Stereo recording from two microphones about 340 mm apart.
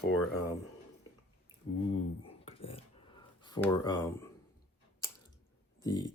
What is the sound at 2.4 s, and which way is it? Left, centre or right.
Dishes, centre.